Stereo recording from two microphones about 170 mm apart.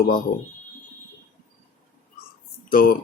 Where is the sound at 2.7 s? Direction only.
60° left (ahead or behind).